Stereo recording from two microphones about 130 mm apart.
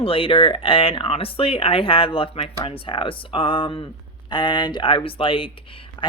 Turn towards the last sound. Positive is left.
turn(degrees=35)  # may be behind; listen again after turning